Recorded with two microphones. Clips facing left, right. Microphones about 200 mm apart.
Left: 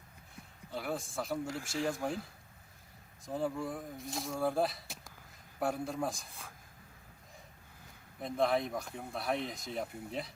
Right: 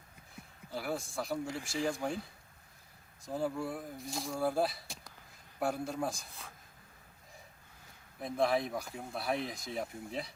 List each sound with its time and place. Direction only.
0.7 s speech: centre (ahead or behind)
8.2 s speech: centre (ahead or behind)